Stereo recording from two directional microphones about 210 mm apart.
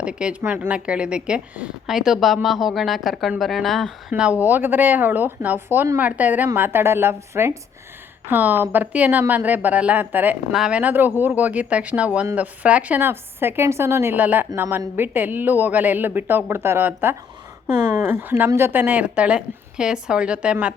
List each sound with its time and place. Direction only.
0.0 s a woman's voice: 5° right (ahead or behind)